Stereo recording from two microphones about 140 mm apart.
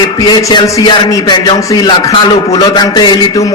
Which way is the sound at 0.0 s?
30° left (ahead or behind).